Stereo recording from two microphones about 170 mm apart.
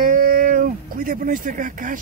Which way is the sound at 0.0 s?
55° right (ahead or behind).